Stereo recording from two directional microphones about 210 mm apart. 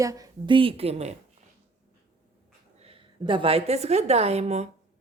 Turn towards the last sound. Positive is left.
turn(degrees=-30)  # may be behind; listen again after turning